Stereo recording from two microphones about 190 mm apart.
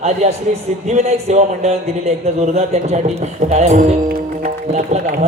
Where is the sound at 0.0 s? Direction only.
35° right (ahead or behind).